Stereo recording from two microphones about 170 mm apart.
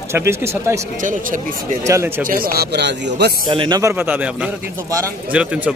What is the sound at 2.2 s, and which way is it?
Speech, 60° right (ahead or behind).